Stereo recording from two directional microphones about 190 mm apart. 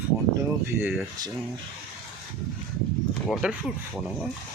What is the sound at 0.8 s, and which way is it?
Speech, 5° right (ahead or behind).